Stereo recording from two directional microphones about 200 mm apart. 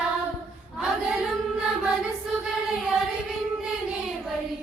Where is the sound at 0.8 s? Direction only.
5° right (ahead or behind).